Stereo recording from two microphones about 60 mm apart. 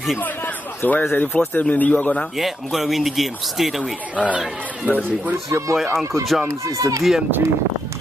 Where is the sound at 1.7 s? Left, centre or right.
Left.